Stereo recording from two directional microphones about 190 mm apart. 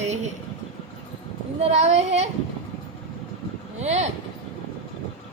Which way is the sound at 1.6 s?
35° right (ahead or behind).